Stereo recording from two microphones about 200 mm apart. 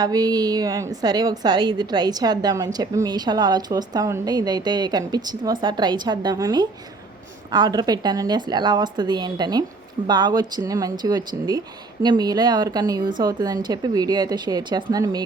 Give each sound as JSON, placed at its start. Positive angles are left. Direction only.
{"t": 0.0, "sound": "a woman's voice", "side_deg": -20}